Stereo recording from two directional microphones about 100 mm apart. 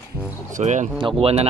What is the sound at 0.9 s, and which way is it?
Speech, 55° right (ahead or behind).